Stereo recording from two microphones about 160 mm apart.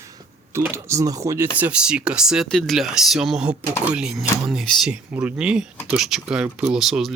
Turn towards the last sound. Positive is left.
turn(degrees=0)  # may be behind; listen again after turning